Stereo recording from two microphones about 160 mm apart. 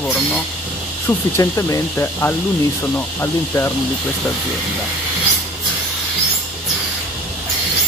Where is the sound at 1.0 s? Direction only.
20° left (ahead or behind).